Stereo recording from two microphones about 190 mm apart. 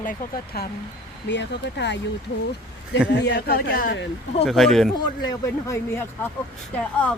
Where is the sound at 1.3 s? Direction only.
65° left (ahead or behind).